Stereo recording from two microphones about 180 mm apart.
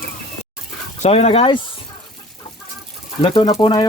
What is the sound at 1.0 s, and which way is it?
Speech, 35° left (ahead or behind).